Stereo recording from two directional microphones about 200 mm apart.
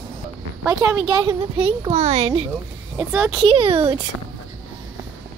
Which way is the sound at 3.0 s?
Centre (ahead or behind).